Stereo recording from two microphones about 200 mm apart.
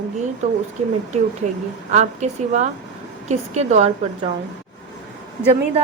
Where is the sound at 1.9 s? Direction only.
35° right (ahead or behind).